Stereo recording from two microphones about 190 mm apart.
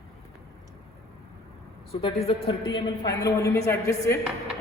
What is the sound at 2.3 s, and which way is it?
A woman's voice, 25° left (ahead or behind).